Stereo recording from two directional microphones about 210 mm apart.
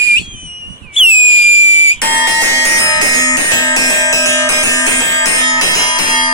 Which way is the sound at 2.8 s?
15° left (ahead or behind).